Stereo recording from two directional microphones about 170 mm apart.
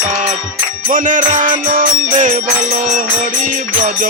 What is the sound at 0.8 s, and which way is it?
Music, 50° right (ahead or behind).